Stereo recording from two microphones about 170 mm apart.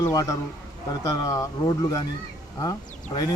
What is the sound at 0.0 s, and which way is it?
Speech, 20° left (ahead or behind).